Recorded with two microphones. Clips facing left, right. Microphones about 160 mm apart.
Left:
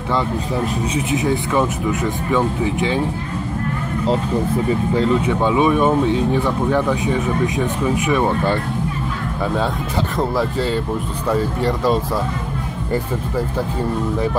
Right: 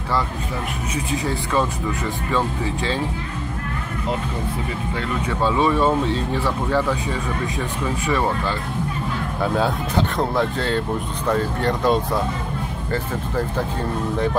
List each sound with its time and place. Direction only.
0.9 s speech: 20° left (ahead or behind)
4.9 s speech: 30° left (ahead or behind)
5.3 s speech: 15° left (ahead or behind)
10.1 s speech: 5° left (ahead or behind)